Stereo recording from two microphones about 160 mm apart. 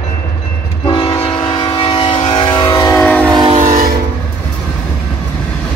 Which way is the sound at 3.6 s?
60° right (ahead or behind).